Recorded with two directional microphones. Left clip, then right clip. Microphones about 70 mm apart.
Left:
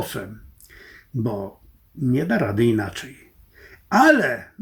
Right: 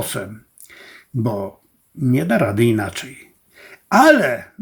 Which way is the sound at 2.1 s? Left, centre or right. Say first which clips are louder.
Right 4 dB; right.